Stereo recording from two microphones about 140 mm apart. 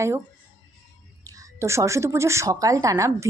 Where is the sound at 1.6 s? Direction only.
20° right (ahead or behind).